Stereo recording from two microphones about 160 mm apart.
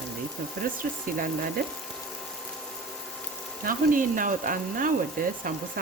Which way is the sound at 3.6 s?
60° right (ahead or behind).